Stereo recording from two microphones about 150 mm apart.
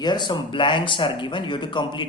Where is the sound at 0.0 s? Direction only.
30° left (ahead or behind).